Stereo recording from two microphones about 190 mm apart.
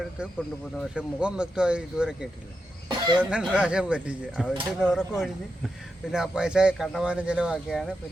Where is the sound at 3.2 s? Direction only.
5° right (ahead or behind).